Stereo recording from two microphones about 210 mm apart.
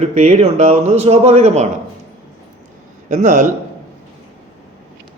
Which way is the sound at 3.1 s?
35° right (ahead or behind).